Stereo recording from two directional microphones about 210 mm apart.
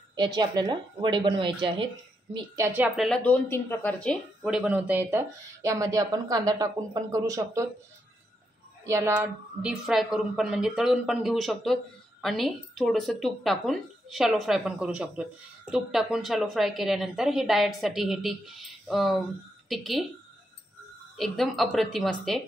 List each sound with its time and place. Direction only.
0.1 s a woman's voice: 20° right (ahead or behind)
8.8 s a woman's voice: 15° right (ahead or behind)
21.2 s a woman's voice: centre (ahead or behind)